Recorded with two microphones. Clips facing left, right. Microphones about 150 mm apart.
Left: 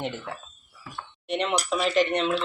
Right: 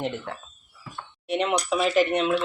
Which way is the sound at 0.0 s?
Centre (ahead or behind).